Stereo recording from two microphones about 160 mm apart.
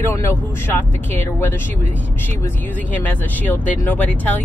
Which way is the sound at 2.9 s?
10° left (ahead or behind).